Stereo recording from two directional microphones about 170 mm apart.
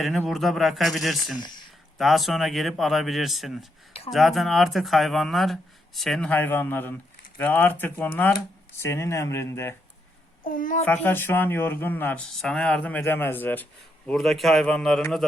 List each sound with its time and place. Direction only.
0.0 s speech: centre (ahead or behind)
10.4 s a child's voice: 55° left (ahead or behind)
10.8 s speech: 10° left (ahead or behind)